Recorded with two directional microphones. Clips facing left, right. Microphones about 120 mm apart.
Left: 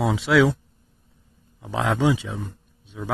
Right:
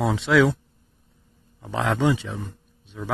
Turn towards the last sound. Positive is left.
turn(degrees=10)  # may be behind; listen again after turning